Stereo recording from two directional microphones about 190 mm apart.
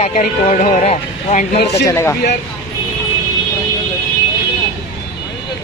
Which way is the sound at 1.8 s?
15° left (ahead or behind).